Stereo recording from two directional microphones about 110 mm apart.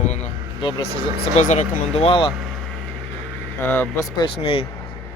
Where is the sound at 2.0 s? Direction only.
55° left (ahead or behind).